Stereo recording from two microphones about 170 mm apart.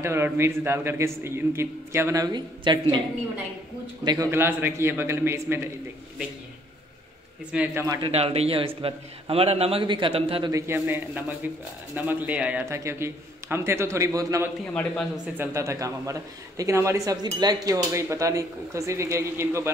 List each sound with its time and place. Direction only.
0.0 s a man's voice: 15° right (ahead or behind)
4.0 s a man's voice: 25° right (ahead or behind)
4.3 s a man's voice: 15° right (ahead or behind)
7.5 s a man's voice: 10° right (ahead or behind)
8.0 s a man's voice: 35° right (ahead or behind)
10.5 s a man's voice: 15° right (ahead or behind)
14.6 s a man's voice: 5° left (ahead or behind)
15.3 s a man's voice: 15° right (ahead or behind)